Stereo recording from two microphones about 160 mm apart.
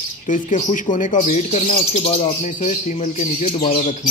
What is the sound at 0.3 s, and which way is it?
Speech, 50° left (ahead or behind).